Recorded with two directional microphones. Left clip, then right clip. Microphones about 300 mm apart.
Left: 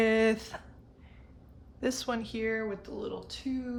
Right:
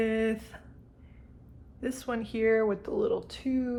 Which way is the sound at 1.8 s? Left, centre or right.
Centre.